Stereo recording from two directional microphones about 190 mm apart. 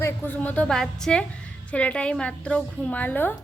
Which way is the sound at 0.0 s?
10° left (ahead or behind).